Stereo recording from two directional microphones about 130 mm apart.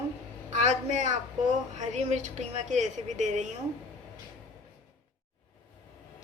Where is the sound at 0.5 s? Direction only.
70° right (ahead or behind).